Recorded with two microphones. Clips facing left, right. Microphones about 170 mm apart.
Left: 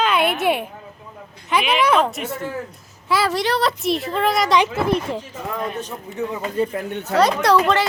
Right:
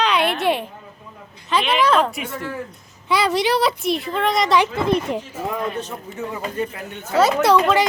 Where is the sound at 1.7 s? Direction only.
10° left (ahead or behind).